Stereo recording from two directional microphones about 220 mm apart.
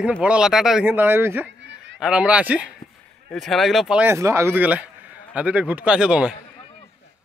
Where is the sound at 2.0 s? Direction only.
5° right (ahead or behind).